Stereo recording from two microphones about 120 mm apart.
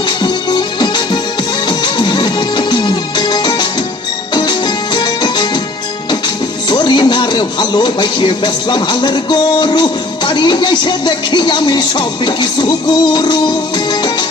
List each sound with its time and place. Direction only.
0.2 s music: 40° left (ahead or behind)
6.1 s speech: 40° left (ahead or behind)